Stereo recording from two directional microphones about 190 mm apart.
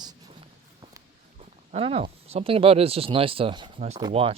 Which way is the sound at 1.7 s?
30° right (ahead or behind).